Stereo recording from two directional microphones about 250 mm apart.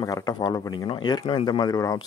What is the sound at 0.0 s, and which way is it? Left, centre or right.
Speech, centre.